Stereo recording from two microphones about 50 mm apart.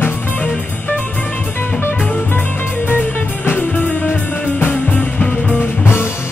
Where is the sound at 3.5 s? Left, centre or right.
Left.